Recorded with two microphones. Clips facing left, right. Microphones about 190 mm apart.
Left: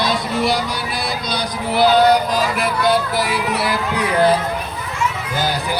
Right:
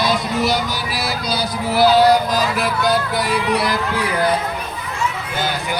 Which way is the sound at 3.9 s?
25° left (ahead or behind).